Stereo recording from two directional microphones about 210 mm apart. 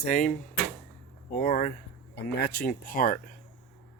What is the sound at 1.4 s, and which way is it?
Speech, 40° left (ahead or behind).